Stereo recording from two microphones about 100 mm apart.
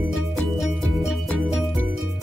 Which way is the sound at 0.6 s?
Centre (ahead or behind).